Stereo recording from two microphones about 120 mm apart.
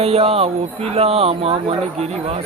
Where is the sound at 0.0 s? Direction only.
55° right (ahead or behind).